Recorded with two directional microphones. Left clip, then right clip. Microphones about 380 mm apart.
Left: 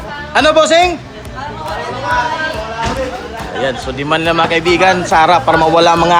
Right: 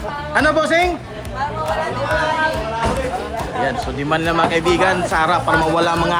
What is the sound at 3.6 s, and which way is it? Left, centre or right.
Speech, centre.